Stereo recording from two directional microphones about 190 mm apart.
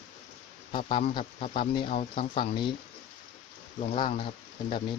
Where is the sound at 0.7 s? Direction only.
30° left (ahead or behind).